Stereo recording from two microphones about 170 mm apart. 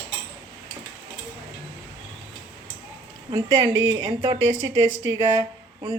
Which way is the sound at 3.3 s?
25° right (ahead or behind).